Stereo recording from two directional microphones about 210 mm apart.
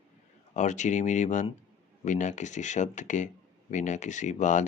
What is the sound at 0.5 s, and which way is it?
Speech, 35° left (ahead or behind).